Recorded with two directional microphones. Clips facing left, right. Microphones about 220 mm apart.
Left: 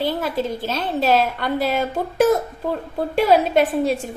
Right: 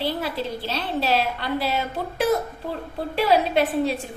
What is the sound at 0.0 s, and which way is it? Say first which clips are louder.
A woman's voice: left 4 dB; 45° left (ahead or behind).